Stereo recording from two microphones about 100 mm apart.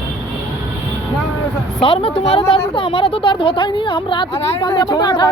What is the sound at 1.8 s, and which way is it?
A woman's voice, 65° left (ahead or behind).